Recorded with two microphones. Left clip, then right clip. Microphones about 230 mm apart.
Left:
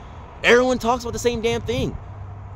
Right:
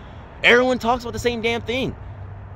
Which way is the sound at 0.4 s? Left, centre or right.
Centre.